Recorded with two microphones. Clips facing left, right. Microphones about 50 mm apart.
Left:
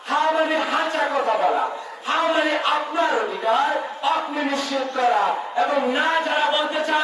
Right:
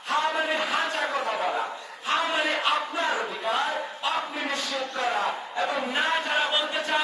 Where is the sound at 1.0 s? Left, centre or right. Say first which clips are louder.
Left 6 dB; centre.